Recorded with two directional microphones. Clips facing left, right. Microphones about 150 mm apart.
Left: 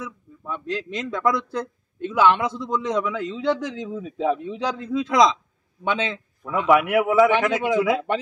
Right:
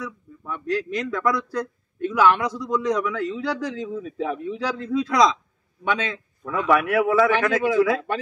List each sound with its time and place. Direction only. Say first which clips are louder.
0.7 s a man's voice: right 4 dB; 20° left (ahead or behind)